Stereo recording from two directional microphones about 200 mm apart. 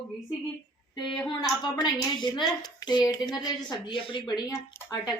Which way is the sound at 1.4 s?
20° left (ahead or behind).